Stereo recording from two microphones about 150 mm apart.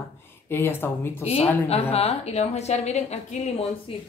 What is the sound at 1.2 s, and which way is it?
A woman's voice, 40° left (ahead or behind).